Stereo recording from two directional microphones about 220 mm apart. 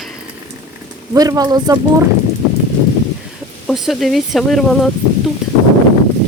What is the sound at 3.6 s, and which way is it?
Speech, centre (ahead or behind).